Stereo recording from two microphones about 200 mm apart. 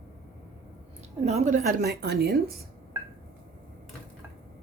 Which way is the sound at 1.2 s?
35° right (ahead or behind).